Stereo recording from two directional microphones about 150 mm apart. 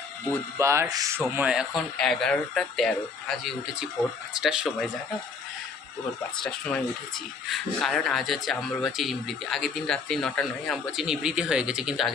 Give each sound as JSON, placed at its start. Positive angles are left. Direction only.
{"t": 0.3, "sound": "speech", "side_deg": -20}
{"t": 1.4, "sound": "speech", "side_deg": -5}
{"t": 6.4, "sound": "speech", "side_deg": 5}